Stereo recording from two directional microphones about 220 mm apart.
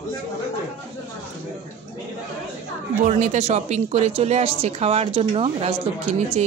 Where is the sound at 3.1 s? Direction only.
30° right (ahead or behind).